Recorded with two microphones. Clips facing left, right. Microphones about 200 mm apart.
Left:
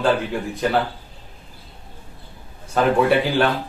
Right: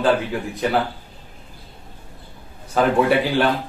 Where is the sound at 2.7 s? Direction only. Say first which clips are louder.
Even; centre (ahead or behind).